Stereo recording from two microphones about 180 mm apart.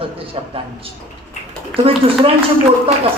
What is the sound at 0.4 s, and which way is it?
Speech, 30° right (ahead or behind).